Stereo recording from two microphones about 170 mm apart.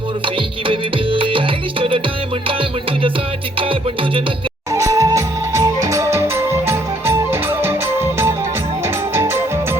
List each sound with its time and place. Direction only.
0.7 s music: 30° right (ahead or behind)
4.7 s music: 20° right (ahead or behind)